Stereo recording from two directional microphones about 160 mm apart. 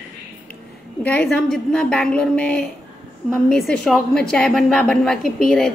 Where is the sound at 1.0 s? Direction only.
5° left (ahead or behind).